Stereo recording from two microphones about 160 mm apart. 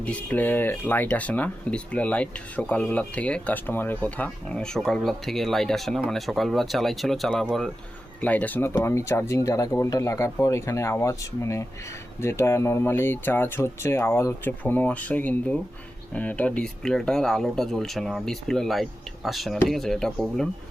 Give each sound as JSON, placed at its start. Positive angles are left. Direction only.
{"t": 0.0, "sound": "speech", "side_deg": 10}